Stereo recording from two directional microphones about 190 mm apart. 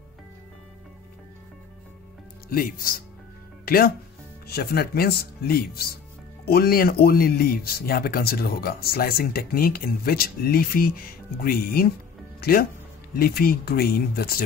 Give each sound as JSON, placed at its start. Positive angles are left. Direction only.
{"t": 2.5, "sound": "speech", "side_deg": 50}